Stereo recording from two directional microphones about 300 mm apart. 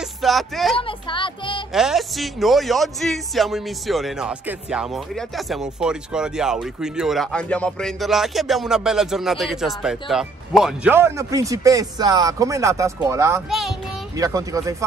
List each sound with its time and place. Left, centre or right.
0.2 s speech: centre
0.7 s speech: centre
1.7 s speech: centre
14.1 s speech: centre